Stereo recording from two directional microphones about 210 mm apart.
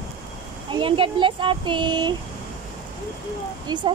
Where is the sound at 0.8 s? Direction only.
25° right (ahead or behind).